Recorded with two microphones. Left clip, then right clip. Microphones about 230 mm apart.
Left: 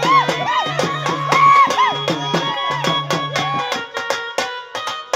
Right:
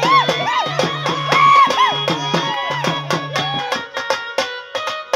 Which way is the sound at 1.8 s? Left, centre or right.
Right.